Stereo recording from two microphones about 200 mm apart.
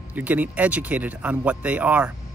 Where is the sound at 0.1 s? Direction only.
10° right (ahead or behind).